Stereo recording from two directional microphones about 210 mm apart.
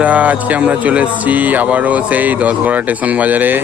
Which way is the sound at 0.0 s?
5° right (ahead or behind).